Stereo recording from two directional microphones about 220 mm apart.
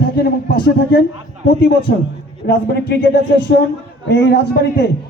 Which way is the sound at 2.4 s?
50° left (ahead or behind).